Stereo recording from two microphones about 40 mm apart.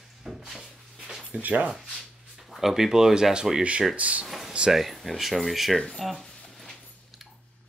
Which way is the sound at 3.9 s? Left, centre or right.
Right.